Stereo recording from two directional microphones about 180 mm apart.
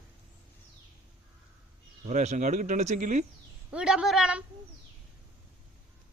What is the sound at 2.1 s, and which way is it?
Speech, 40° right (ahead or behind).